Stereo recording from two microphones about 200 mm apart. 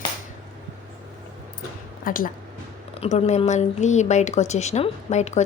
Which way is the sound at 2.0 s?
45° left (ahead or behind).